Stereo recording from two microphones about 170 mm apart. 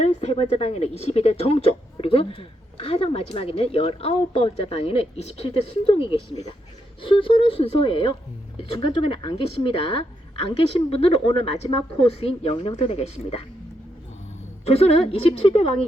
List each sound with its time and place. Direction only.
0.0 s a woman's voice: 40° left (ahead or behind)
14.7 s a woman's voice: 35° left (ahead or behind)